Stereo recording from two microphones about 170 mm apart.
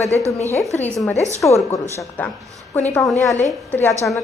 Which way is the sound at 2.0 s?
10° left (ahead or behind).